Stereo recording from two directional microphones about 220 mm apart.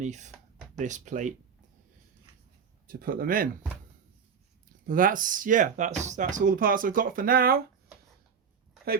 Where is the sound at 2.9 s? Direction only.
40° right (ahead or behind).